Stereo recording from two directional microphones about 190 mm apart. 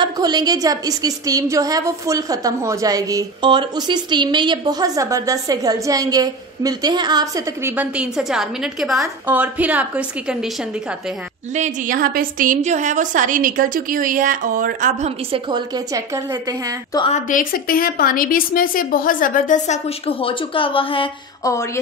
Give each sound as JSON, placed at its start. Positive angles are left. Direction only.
{"t": 0.0, "sound": "a woman's voice", "side_deg": -20}
{"t": 11.5, "sound": "a woman's voice", "side_deg": -40}
{"t": 16.9, "sound": "a woman's voice", "side_deg": 25}
{"t": 17.3, "sound": "a woman's voice", "side_deg": 45}